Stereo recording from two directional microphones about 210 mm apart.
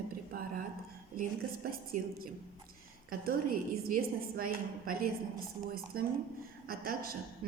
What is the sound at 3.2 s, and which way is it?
A woman's voice, 45° right (ahead or behind).